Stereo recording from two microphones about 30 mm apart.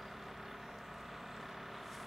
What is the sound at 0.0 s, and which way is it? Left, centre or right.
Vehicle, centre.